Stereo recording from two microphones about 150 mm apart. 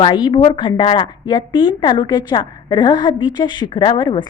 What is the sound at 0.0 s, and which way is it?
A woman's voice, 30° left (ahead or behind).